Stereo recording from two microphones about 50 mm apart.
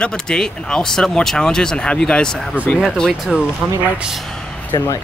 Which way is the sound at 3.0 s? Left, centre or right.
Centre.